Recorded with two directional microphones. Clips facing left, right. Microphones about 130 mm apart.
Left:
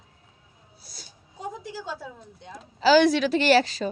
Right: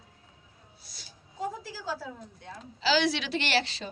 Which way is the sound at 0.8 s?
40° left (ahead or behind).